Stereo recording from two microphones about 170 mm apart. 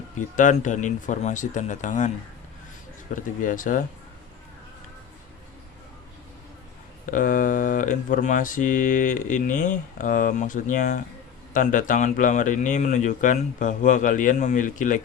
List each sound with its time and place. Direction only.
0.3 s speech: 50° left (ahead or behind)
3.2 s speech: 50° left (ahead or behind)
7.0 s speech: 50° left (ahead or behind)